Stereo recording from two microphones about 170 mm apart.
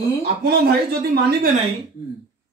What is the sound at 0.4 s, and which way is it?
A man's voice, 70° right (ahead or behind).